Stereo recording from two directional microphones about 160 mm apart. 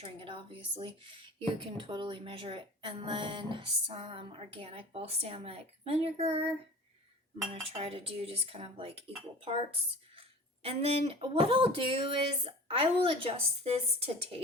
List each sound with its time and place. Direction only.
0.0 s speech: 35° right (ahead or behind)
7.5 s speech: 35° right (ahead or behind)